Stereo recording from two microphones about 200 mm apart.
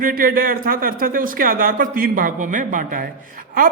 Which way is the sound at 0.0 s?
45° right (ahead or behind).